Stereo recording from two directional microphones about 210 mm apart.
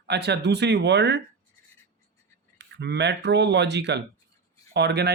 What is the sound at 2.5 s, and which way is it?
Speech, 55° right (ahead or behind).